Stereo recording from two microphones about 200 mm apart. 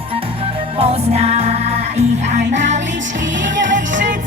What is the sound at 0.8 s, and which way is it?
Music, 30° right (ahead or behind).